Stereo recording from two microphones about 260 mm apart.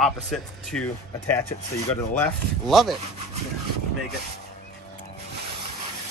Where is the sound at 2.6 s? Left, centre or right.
Centre.